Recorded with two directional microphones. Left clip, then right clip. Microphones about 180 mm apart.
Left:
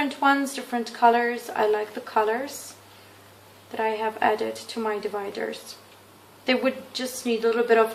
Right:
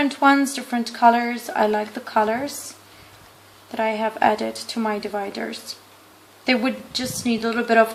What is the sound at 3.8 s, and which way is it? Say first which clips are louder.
Speech: right 4 dB; 40° right (ahead or behind).